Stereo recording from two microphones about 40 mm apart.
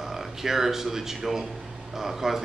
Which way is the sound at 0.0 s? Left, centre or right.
Centre.